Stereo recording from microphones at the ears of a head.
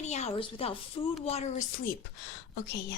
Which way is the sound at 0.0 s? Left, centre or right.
Left.